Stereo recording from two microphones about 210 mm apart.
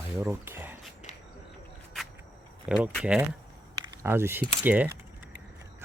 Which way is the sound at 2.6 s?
5° right (ahead or behind).